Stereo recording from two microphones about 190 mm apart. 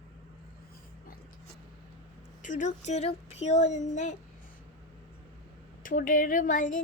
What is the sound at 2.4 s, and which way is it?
Speech, 40° left (ahead or behind).